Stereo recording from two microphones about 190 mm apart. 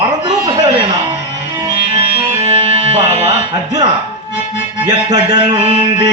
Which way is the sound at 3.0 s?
35° right (ahead or behind).